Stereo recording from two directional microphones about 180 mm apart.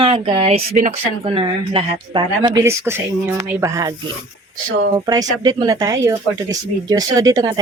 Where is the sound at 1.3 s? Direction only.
30° right (ahead or behind).